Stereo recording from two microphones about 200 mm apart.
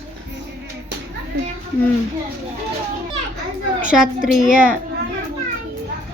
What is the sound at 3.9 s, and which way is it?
Speech, centre (ahead or behind).